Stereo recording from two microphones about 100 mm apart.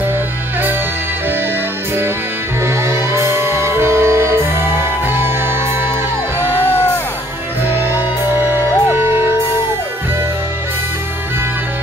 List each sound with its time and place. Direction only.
2.6 s music: 25° right (ahead or behind)
6.4 s music: 25° left (ahead or behind)
7.9 s music: 20° right (ahead or behind)